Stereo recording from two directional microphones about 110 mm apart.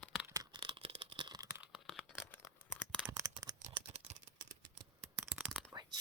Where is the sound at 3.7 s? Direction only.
65° right (ahead or behind).